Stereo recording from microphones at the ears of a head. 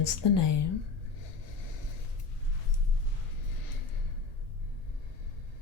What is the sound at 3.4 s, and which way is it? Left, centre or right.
Music, left.